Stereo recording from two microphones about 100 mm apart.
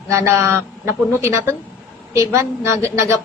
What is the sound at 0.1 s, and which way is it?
A man's voice, 30° right (ahead or behind).